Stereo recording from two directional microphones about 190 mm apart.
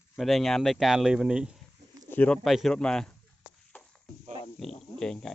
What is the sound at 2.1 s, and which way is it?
Speech, 5° left (ahead or behind).